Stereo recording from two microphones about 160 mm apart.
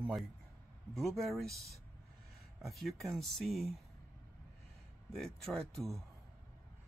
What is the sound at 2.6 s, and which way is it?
Speech, centre (ahead or behind).